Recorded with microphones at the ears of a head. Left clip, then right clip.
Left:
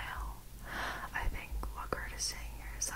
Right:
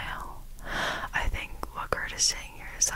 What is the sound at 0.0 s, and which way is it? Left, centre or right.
Whispering, right.